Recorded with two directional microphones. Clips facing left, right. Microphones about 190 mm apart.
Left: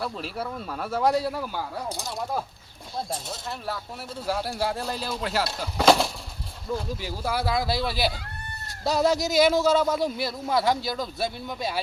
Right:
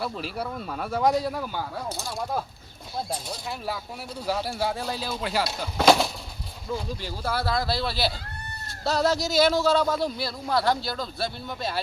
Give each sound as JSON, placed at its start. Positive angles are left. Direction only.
{"t": 0.0, "sound": "speech", "side_deg": 0}
{"t": 1.9, "sound": "speech", "side_deg": 15}
{"t": 4.2, "sound": "speech", "side_deg": 0}